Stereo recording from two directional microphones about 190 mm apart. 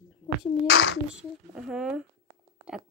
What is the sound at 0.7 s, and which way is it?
Speech, 65° left (ahead or behind).